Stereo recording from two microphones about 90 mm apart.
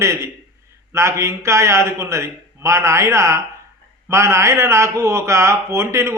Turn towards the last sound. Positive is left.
turn(degrees=-30)  # may be behind; listen again after turning